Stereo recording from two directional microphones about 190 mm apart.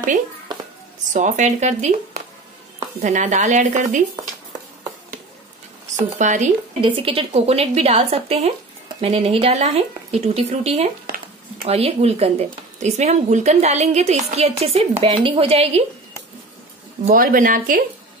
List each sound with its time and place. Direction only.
1.1 s speech: 40° right (ahead or behind)
6.1 s speech: 40° right (ahead or behind)
6.8 s speech: 30° right (ahead or behind)
17.1 s speech: 50° right (ahead or behind)